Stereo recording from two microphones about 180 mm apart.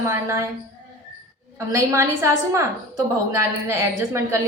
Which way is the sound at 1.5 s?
15° right (ahead or behind).